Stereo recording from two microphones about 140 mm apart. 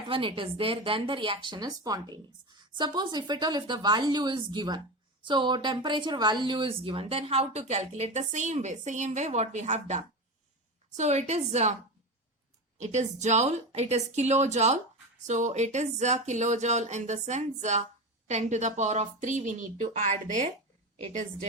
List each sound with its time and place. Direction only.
0.1 s speech: 40° right (ahead or behind)
12.8 s speech: 55° right (ahead or behind)